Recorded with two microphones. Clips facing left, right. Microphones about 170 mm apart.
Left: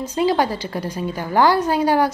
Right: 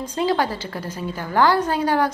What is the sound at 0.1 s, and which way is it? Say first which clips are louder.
A woman's voice: left 3 dB; 15° left (ahead or behind).